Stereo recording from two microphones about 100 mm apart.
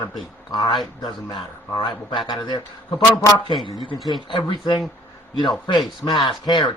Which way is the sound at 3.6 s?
55° left (ahead or behind).